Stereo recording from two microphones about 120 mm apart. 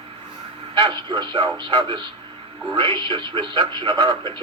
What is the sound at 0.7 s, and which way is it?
Speech, 40° right (ahead or behind).